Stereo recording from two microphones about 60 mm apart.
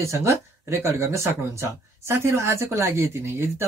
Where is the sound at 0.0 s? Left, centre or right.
Right.